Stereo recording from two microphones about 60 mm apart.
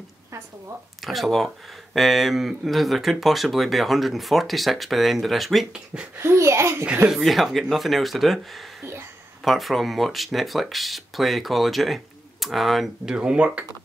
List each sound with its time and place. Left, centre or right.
1.0 s speech: centre
6.1 s a child's voice: right
7.1 s speech: centre
13.1 s speech: centre